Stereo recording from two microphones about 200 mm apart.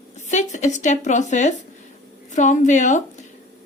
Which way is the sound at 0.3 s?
35° left (ahead or behind).